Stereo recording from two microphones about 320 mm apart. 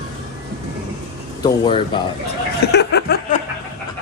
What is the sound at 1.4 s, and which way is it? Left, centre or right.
Speech, centre.